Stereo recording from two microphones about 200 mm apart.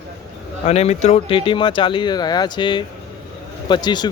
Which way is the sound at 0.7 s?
35° left (ahead or behind).